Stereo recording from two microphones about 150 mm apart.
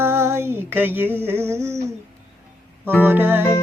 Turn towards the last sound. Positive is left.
turn(degrees=-15)  # may be behind; listen again after turning